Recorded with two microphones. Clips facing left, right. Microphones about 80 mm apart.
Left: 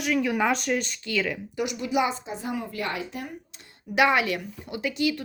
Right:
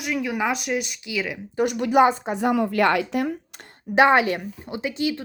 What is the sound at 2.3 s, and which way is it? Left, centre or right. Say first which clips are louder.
Speech: right 10 dB; right.